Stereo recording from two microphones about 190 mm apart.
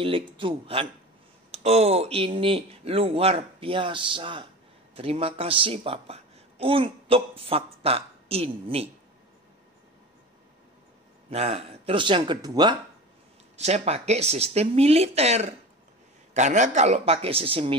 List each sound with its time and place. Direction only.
0.0 s speech: 25° right (ahead or behind)
11.2 s speech: 35° right (ahead or behind)
13.6 s speech: 35° right (ahead or behind)